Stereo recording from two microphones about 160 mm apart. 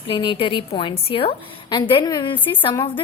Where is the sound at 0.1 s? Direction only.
35° left (ahead or behind).